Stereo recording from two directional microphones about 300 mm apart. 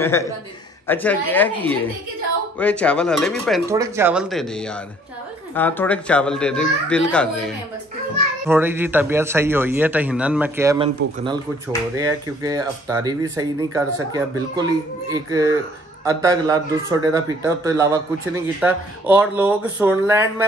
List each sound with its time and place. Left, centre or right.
0.8 s speech: centre
3.6 s speech: centre
12.0 s speech: centre